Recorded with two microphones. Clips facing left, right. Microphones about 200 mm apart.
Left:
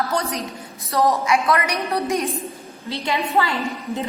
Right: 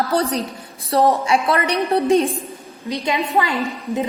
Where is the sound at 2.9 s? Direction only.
20° right (ahead or behind).